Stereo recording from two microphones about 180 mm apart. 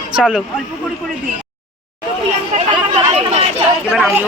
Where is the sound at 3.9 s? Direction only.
Centre (ahead or behind).